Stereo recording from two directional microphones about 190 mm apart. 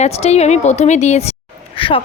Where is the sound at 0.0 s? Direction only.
35° left (ahead or behind).